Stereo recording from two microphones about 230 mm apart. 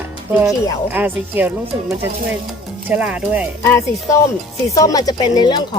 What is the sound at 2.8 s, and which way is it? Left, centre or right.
Speech, centre.